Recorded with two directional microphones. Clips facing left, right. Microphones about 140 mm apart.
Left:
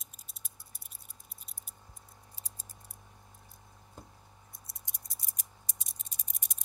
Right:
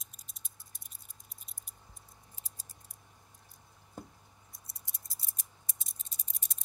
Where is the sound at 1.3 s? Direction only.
Centre (ahead or behind).